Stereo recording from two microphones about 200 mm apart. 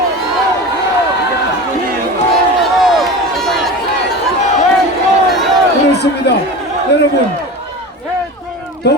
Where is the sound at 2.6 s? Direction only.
Centre (ahead or behind).